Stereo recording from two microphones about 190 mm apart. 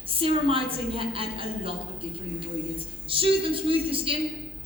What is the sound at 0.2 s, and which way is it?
A woman's voice, 30° right (ahead or behind).